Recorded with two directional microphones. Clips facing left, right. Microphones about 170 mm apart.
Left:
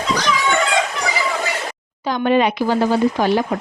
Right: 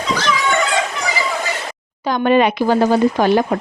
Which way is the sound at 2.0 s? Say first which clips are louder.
Right 2 dB; 50° right (ahead or behind).